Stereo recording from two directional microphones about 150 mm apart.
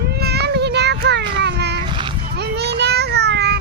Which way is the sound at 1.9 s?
35° right (ahead or behind).